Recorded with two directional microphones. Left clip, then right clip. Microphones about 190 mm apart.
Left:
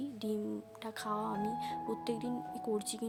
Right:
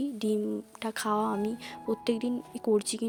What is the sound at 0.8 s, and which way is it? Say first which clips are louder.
Speech: right 9 dB; 45° right (ahead or behind).